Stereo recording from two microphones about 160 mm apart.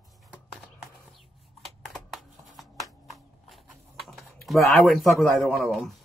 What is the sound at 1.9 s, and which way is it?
Shuffling cards, centre (ahead or behind).